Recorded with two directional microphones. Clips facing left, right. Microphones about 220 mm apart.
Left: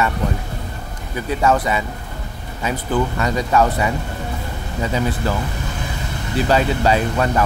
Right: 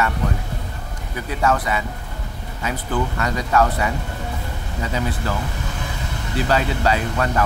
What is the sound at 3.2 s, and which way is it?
Speech, 20° left (ahead or behind).